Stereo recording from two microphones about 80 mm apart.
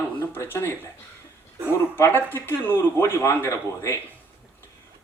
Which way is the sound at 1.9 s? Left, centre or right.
Left.